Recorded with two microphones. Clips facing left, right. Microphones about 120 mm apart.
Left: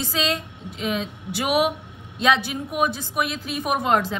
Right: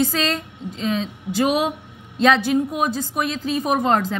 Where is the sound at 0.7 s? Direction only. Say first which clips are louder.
Right 3 dB; 35° right (ahead or behind).